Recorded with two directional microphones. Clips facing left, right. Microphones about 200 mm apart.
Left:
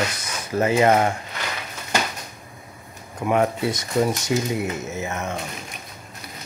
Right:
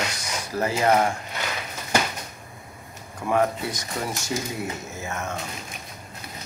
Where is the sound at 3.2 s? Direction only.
20° left (ahead or behind).